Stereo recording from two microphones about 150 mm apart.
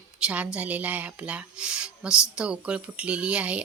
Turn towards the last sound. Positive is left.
turn(degrees=-10)  # may be behind; listen again after turning